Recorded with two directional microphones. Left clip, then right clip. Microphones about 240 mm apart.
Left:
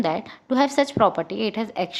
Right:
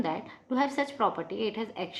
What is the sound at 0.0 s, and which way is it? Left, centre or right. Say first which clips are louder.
A woman's voice: left 8 dB; left.